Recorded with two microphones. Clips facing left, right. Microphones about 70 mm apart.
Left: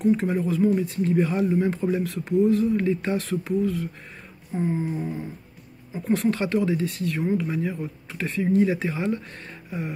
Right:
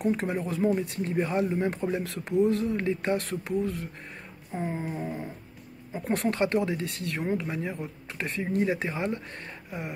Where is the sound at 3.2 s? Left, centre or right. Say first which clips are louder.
Left 4 dB; right.